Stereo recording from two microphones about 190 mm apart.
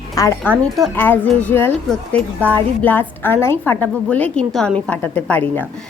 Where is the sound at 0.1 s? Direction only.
20° left (ahead or behind).